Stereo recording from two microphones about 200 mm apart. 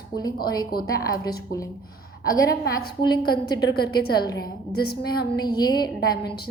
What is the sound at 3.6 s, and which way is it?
A woman's voice, 55° left (ahead or behind).